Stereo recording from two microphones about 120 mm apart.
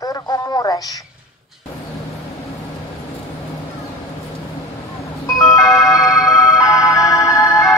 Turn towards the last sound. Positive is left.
turn(degrees=30)  # may be behind; listen again after turning